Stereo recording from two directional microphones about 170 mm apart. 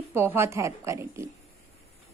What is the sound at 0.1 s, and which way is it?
A woman's voice, 15° right (ahead or behind).